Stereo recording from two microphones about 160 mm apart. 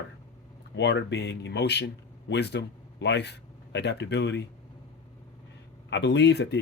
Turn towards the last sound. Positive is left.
turn(degrees=90)